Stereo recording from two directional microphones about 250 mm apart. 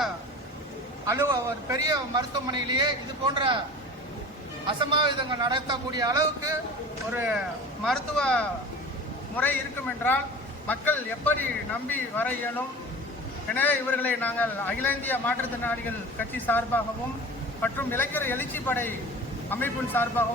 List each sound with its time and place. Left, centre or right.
1.0 s a man's voice: centre
4.6 s a man's voice: centre
7.9 s a man's voice: centre
10.7 s a man's voice: centre